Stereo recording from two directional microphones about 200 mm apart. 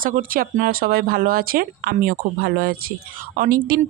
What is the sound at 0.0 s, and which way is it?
Speech, 45° right (ahead or behind).